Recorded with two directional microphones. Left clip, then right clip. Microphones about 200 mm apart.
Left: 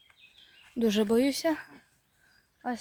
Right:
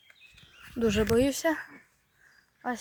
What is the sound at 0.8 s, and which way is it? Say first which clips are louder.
Speech: even; 25° left (ahead or behind).